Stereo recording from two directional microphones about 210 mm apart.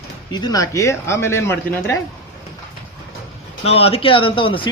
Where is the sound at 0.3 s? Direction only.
20° left (ahead or behind).